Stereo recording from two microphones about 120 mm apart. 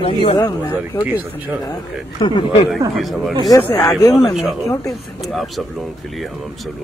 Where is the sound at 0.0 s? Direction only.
55° left (ahead or behind).